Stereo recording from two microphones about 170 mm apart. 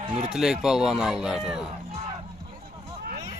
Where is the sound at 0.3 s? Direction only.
5° right (ahead or behind).